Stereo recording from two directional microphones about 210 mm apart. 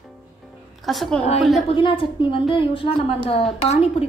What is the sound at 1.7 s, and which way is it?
A woman's voice, 25° left (ahead or behind).